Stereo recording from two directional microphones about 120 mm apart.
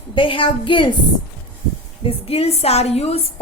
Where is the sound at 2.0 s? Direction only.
50° left (ahead or behind).